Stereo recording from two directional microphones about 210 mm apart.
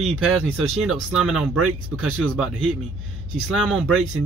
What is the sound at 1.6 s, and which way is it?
Speech, 90° right.